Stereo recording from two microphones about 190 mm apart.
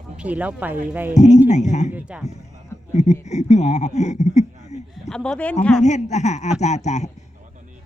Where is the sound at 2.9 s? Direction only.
35° left (ahead or behind).